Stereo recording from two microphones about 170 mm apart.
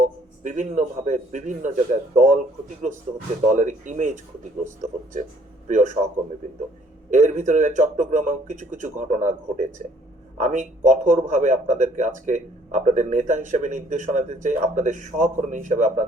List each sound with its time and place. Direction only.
0.0 s a man's voice: 45° right (ahead or behind)
7.1 s a man's voice: 45° right (ahead or behind)